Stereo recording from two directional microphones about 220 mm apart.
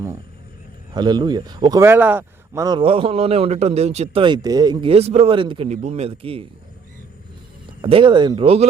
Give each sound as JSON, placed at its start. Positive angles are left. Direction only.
{"t": 0.9, "sound": "a man's voice", "side_deg": -20}
{"t": 7.8, "sound": "a man's voice", "side_deg": -25}